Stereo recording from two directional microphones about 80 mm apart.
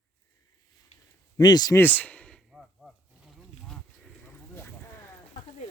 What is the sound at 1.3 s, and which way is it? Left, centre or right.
Speech, left.